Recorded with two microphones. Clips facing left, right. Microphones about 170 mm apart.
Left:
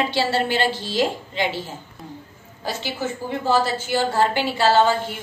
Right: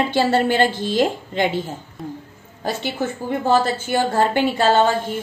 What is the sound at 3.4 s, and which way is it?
A woman's voice, 50° right (ahead or behind).